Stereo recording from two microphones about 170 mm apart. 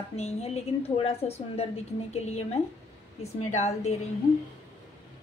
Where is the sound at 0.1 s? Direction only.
40° left (ahead or behind).